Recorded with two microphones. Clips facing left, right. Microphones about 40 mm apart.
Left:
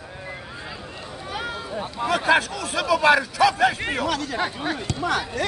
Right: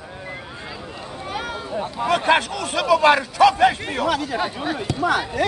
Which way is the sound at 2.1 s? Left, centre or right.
Right.